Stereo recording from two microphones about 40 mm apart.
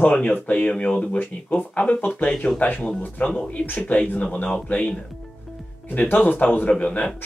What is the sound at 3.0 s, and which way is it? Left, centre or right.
Speech, left.